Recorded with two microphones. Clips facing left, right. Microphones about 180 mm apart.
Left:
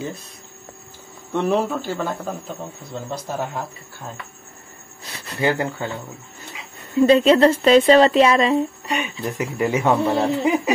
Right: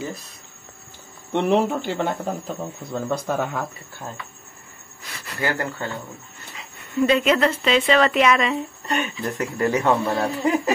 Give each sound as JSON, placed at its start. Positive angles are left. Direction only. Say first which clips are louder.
{"t": 1.3, "sound": "speech", "louder": "right 1 dB", "side_deg": -20}
{"t": 2.9, "sound": "a man's voice", "louder": "right 5 dB", "side_deg": -55}
{"t": 5.0, "sound": "speech", "louder": "left 5 dB", "side_deg": 25}
{"t": 7.0, "sound": "speech", "louder": "left 5 dB", "side_deg": 30}
{"t": 8.8, "sound": "a man's voice", "louder": "even", "side_deg": 0}